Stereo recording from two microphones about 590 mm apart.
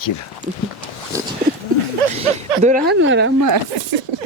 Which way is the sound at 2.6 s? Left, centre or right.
Centre.